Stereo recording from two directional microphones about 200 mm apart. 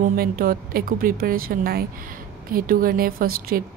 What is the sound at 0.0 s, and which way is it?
A woman's voice, 45° right (ahead or behind).